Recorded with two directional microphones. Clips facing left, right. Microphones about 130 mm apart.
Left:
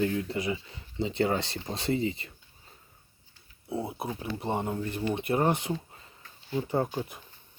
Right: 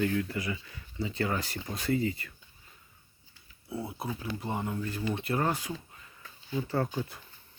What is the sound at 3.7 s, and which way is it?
Speech, 25° left (ahead or behind).